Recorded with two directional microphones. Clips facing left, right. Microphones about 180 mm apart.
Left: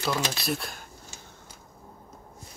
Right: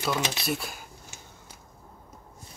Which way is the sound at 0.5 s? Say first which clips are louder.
Even; 5° right (ahead or behind).